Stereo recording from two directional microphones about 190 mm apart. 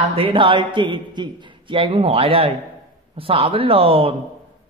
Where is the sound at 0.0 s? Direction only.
30° right (ahead or behind).